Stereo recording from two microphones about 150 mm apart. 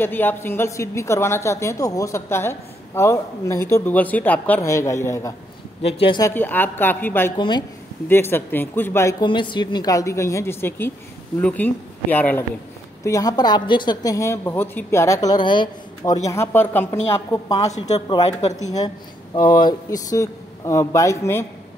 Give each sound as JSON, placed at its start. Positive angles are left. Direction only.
{"t": 0.0, "sound": "a woman's voice", "side_deg": 15}
{"t": 5.8, "sound": "speech", "side_deg": 40}
{"t": 6.2, "sound": "a woman's voice", "side_deg": 15}
{"t": 7.3, "sound": "speech", "side_deg": 30}
{"t": 8.1, "sound": "a woman's voice", "side_deg": 15}
{"t": 9.2, "sound": "a woman's voice", "side_deg": 35}
{"t": 13.0, "sound": "a woman's voice", "side_deg": 25}
{"t": 17.7, "sound": "speech", "side_deg": 45}
{"t": 19.5, "sound": "a woman's voice", "side_deg": 25}